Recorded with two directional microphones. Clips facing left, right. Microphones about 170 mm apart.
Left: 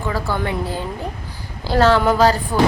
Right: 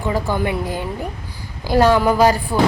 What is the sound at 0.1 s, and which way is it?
Speech, 15° right (ahead or behind).